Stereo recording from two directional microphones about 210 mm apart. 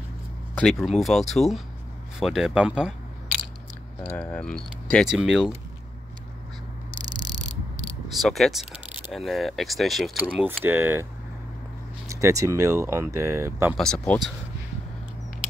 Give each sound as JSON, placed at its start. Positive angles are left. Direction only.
{"t": 0.6, "sound": "speech", "side_deg": 0}
{"t": 4.2, "sound": "speech", "side_deg": 5}
{"t": 7.1, "sound": "cricket", "side_deg": -20}
{"t": 7.8, "sound": "a sound", "side_deg": 0}
{"t": 9.1, "sound": "speech", "side_deg": 0}
{"t": 12.1, "sound": "speech", "side_deg": -15}
{"t": 13.7, "sound": "speech", "side_deg": 5}